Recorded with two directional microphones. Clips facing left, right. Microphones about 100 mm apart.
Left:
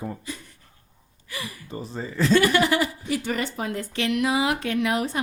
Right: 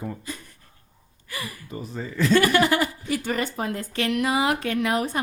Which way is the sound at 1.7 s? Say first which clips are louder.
Left 2 dB; 30° left (ahead or behind).